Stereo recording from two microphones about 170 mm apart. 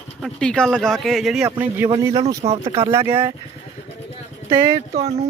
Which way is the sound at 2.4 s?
35° right (ahead or behind).